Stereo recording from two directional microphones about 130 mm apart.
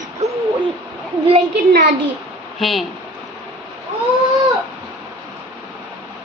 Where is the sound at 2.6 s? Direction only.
Centre (ahead or behind).